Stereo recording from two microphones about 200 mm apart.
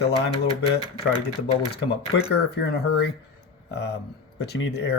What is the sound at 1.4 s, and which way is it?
Speech, 55° left (ahead or behind).